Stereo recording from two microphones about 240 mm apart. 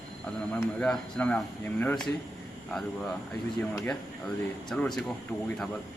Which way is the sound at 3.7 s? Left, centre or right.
Centre.